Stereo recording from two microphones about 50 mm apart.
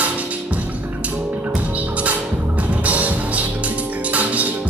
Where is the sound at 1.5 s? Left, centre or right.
Right.